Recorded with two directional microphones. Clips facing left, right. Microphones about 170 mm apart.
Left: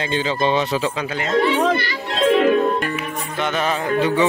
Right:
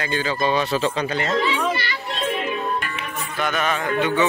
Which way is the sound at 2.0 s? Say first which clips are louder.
Left 11 dB; 90° left.